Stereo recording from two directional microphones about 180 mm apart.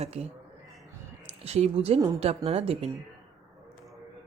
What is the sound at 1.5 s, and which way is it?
Speech, 35° right (ahead or behind).